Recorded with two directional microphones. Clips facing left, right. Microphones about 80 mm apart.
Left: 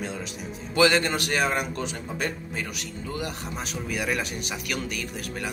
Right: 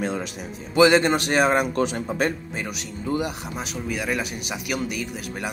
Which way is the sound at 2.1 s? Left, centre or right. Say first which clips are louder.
Right 5 dB; right.